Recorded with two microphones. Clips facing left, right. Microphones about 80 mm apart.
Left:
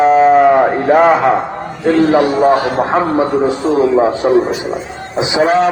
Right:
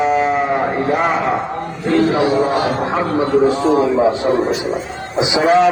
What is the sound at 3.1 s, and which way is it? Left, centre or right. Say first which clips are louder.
Speech: left 1 dB; centre.